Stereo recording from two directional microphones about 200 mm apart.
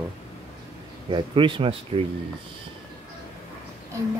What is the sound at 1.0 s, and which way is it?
Speech, 25° right (ahead or behind).